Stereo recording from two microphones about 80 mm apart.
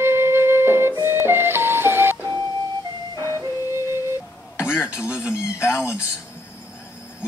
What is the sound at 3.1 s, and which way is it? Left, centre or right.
Music, left.